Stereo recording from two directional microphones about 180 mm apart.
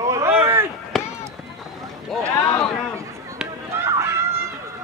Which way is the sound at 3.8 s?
15° right (ahead or behind).